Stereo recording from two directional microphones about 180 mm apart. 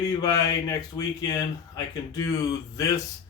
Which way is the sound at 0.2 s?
20° left (ahead or behind).